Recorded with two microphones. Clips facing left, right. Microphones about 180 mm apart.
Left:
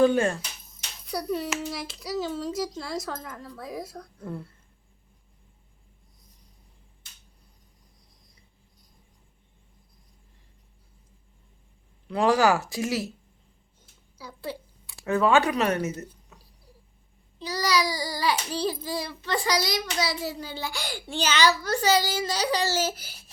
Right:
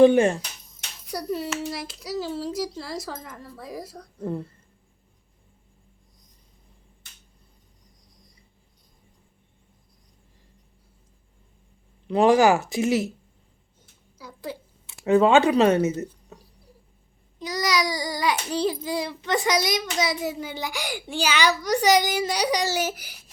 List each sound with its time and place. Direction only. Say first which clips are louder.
0.0 s speech: right 5 dB; 20° right (ahead or behind)
1.0 s a child's voice: even; centre (ahead or behind)
12.0 s speech: right 4 dB; 20° right (ahead or behind)
14.8 s speech: right 5 dB; 20° right (ahead or behind)
17.4 s a child's voice: right 1 dB; 20° right (ahead or behind)